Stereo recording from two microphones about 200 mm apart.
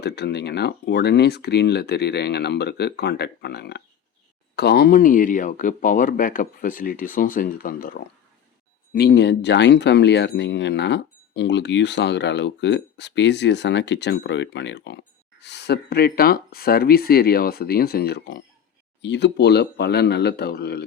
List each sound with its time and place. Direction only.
0.0 s speech: 55° left (ahead or behind)